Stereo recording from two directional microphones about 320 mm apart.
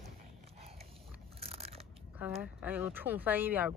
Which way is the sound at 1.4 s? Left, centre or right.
Centre.